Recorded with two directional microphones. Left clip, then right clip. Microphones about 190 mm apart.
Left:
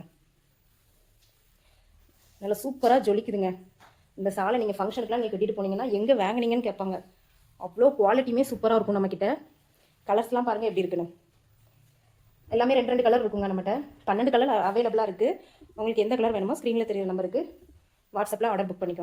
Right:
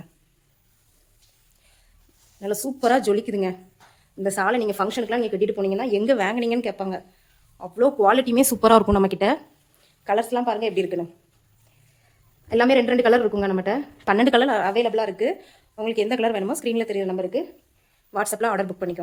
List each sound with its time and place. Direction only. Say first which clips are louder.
2.4 s speech: right 2 dB; 30° right (ahead or behind); by 5.8 s 55° right (ahead or behind)
5.9 s speech: right 2 dB; 35° right (ahead or behind)
6.1 s speech: right 3 dB; 20° right (ahead or behind)
7.6 s speech: right 3 dB; 40° right (ahead or behind)
10.0 s speech: right 3 dB; 20° right (ahead or behind)
12.5 s a woman's voice: right 5 dB; 60° right (ahead or behind)
14.5 s speech: right 3 dB; 30° right (ahead or behind)